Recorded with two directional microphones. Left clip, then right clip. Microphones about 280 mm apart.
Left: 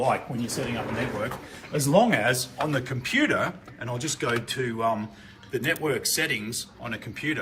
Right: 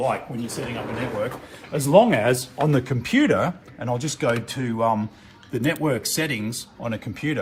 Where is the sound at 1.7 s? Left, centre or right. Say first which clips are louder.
Right 5 dB; right.